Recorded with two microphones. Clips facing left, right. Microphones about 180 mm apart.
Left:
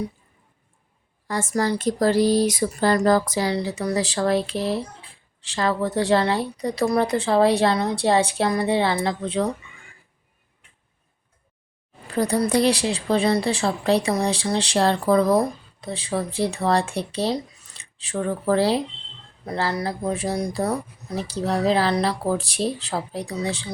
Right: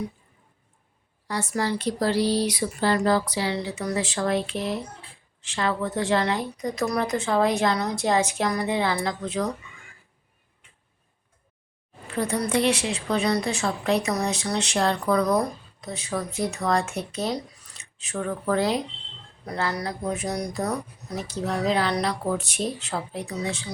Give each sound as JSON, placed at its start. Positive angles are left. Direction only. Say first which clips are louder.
{"t": 1.3, "sound": "a woman's voice", "louder": "left 3 dB", "side_deg": 45}
{"t": 12.1, "sound": "a woman's voice", "louder": "left 4 dB", "side_deg": 35}